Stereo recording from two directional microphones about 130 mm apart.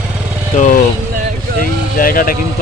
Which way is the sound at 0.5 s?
70° left (ahead or behind).